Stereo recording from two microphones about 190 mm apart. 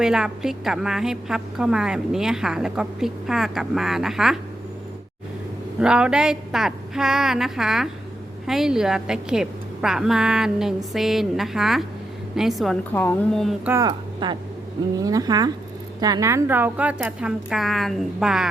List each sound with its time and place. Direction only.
0.0 s a woman's voice: 5° right (ahead or behind)
5.8 s a woman's voice: 5° right (ahead or behind)
12.9 s a woman's voice: 10° left (ahead or behind)
13.7 s a woman's voice: 25° right (ahead or behind); by 18.4 s 5° right (ahead or behind)